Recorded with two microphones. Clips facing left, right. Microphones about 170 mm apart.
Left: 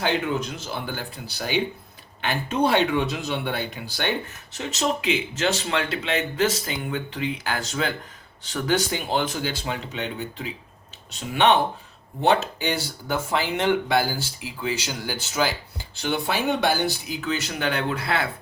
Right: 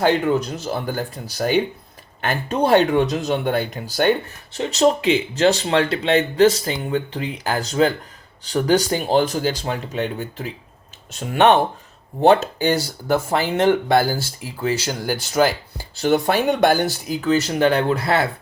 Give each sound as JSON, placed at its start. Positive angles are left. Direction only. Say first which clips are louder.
{"t": 0.0, "sound": "speech", "louder": "right 7 dB", "side_deg": -45}